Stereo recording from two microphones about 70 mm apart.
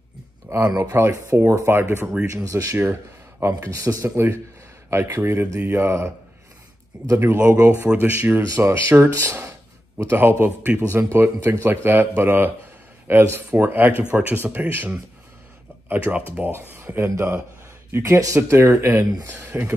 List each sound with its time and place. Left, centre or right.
0.5 s speech: right
2.3 s speech: right
7.3 s speech: right
8.4 s speech: right
10.8 s speech: right